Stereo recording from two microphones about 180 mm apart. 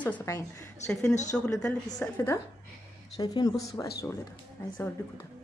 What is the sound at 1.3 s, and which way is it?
Speech, 5° left (ahead or behind).